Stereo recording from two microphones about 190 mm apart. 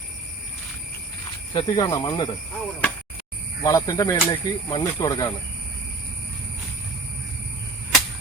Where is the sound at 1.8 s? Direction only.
20° left (ahead or behind).